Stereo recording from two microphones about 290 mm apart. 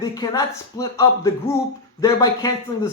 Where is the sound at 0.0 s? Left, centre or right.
Centre.